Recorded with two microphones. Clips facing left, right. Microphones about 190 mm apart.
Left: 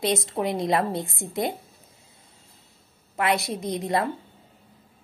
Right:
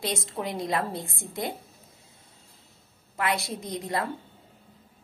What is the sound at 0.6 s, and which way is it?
Speech, 20° left (ahead or behind).